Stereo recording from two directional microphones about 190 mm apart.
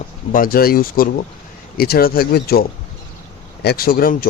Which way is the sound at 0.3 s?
50° left (ahead or behind).